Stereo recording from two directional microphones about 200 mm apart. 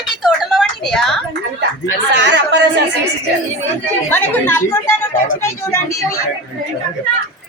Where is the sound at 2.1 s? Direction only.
60° right (ahead or behind).